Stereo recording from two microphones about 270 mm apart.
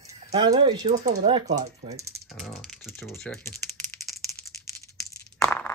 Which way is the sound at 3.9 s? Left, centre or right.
Centre.